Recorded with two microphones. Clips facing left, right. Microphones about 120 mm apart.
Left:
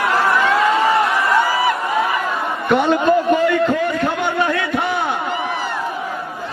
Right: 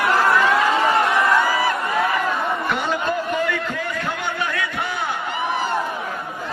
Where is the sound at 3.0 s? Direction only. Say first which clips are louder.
Left 8 dB; 30° left (ahead or behind).